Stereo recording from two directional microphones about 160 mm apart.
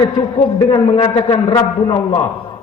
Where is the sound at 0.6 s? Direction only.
30° left (ahead or behind).